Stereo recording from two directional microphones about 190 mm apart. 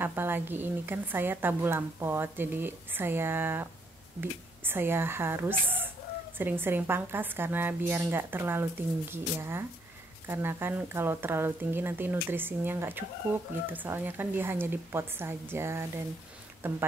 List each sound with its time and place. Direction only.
0.0 s a woman's voice: 10° right (ahead or behind)